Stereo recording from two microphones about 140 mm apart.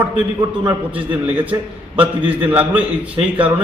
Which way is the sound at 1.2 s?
10° right (ahead or behind).